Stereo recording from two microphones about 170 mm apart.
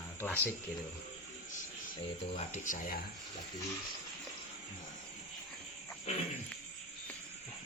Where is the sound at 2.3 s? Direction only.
45° left (ahead or behind).